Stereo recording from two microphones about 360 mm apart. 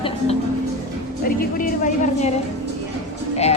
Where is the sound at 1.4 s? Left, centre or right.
Left.